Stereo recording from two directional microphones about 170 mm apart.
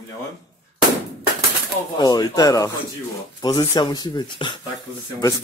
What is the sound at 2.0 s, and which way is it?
Speech, 25° left (ahead or behind).